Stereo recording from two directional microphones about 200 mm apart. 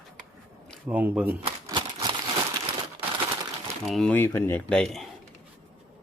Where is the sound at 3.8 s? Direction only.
5° left (ahead or behind).